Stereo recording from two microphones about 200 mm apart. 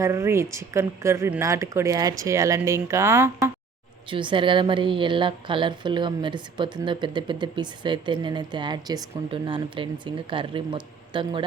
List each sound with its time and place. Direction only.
0.0 s a woman's voice: 15° right (ahead or behind)
4.1 s a woman's voice: 25° right (ahead or behind)